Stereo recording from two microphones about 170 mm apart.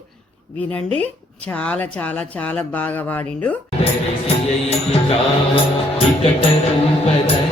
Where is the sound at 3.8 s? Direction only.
35° left (ahead or behind).